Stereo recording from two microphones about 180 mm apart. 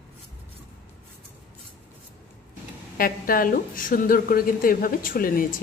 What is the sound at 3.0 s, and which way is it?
A woman's voice, 55° left (ahead or behind).